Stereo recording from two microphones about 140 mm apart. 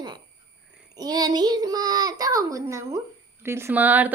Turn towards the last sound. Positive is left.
turn(degrees=-10)  # may be behind; listen again after turning